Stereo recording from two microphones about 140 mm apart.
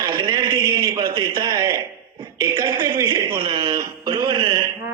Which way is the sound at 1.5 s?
20° right (ahead or behind).